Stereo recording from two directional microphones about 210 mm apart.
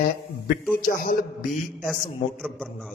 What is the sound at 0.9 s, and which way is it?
Speech, 40° left (ahead or behind).